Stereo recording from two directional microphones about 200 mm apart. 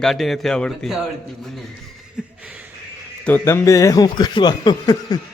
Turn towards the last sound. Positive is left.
turn(degrees=20)  # may be behind; listen again after turning